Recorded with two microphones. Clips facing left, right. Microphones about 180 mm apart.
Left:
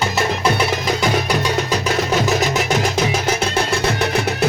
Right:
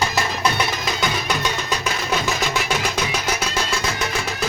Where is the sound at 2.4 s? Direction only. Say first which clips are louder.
Left 5 dB; 45° left (ahead or behind).